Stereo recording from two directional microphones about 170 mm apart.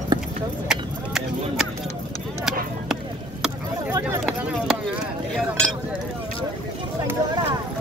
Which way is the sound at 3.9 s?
15° right (ahead or behind).